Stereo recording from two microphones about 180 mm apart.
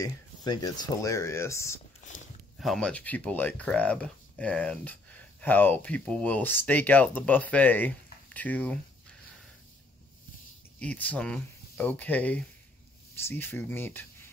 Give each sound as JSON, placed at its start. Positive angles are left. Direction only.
{"t": 0.0, "sound": "speech", "side_deg": 20}
{"t": 2.6, "sound": "speech", "side_deg": 0}
{"t": 10.8, "sound": "speech", "side_deg": 5}